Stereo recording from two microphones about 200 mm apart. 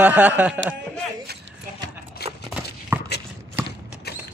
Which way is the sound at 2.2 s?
55° left (ahead or behind).